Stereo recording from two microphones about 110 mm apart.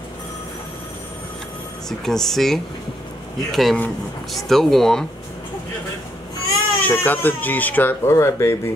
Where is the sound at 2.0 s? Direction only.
5° left (ahead or behind).